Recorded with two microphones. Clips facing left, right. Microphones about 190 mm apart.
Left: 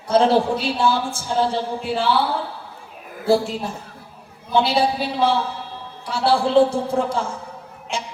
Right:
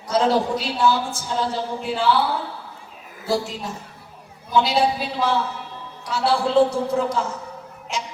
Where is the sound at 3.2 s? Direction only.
55° left (ahead or behind).